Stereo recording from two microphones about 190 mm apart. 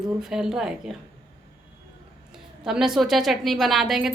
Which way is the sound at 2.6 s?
5° right (ahead or behind).